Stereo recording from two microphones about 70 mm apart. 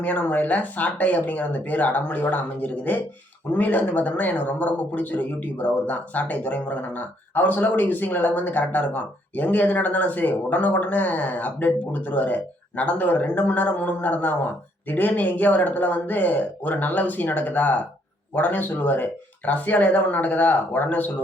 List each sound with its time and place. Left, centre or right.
0.0 s speech: left